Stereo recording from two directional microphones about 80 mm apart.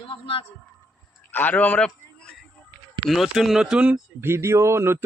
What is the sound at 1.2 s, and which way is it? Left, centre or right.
Speech, left.